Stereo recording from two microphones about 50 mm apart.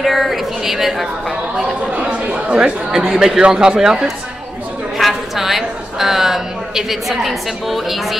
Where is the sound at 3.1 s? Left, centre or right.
Centre.